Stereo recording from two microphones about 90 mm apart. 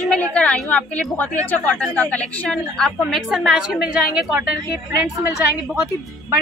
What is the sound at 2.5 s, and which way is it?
A woman's voice, 5° left (ahead or behind).